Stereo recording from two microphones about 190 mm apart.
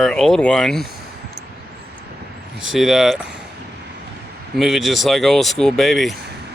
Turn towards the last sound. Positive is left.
turn(degrees=0)  # may be behind; listen again after turning